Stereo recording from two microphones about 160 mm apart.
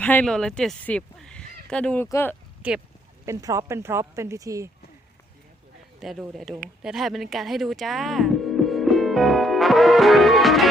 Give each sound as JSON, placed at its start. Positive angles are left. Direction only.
{"t": 0.0, "sound": "speech", "side_deg": 10}
{"t": 2.6, "sound": "speech", "side_deg": -10}
{"t": 3.2, "sound": "speech", "side_deg": -20}
{"t": 6.0, "sound": "speech", "side_deg": 0}